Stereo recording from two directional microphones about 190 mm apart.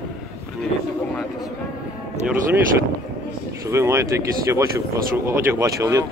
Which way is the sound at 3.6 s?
15° right (ahead or behind).